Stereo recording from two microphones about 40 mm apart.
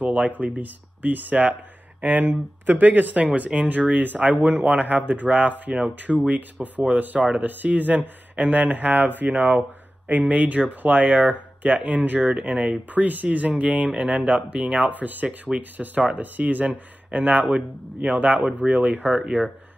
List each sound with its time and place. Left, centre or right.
0.0 s speech: right
3.3 s speech: right
12.9 s speech: right
15.5 s speech: centre
15.8 s speech: right
19.0 s speech: centre